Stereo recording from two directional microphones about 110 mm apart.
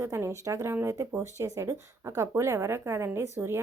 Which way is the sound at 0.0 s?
25° right (ahead or behind).